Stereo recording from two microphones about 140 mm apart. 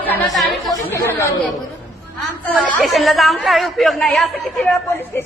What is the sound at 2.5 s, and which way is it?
Speech, 5° left (ahead or behind).